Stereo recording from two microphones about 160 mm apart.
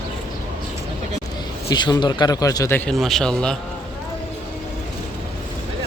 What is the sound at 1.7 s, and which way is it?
Speech, 25° left (ahead or behind).